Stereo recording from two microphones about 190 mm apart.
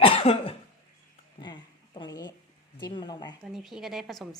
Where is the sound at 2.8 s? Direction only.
25° left (ahead or behind).